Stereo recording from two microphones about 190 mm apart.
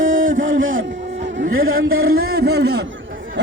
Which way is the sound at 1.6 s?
90° right.